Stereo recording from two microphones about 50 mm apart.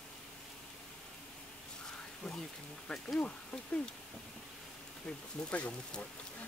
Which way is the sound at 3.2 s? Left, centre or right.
Left.